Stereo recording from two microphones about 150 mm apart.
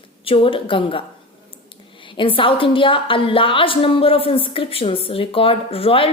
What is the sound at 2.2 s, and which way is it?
A woman's voice, 35° left (ahead or behind).